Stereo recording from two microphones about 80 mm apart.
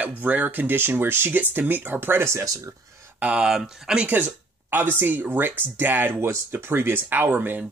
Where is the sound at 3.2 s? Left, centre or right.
Centre.